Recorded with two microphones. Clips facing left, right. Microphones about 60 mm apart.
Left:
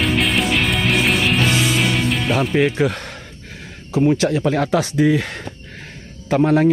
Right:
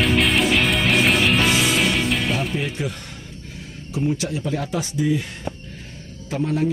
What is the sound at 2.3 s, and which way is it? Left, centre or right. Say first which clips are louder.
Speech: left 8 dB; left.